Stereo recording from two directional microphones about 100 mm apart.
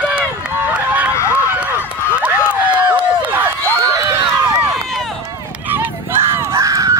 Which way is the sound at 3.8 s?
30° right (ahead or behind).